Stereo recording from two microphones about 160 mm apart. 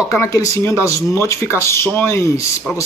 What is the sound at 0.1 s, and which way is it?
Speech, 20° left (ahead or behind).